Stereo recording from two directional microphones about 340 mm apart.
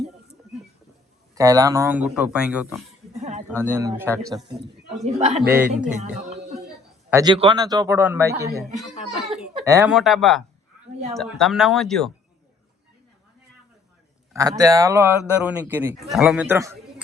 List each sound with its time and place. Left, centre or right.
1.4 s a man's voice: centre
3.2 s a sound: centre
3.8 s speech: centre
4.9 s a man's voice: centre
5.5 s a man's voice: centre
6.0 s music: centre
7.1 s a man's voice: centre
14.3 s a man's voice: centre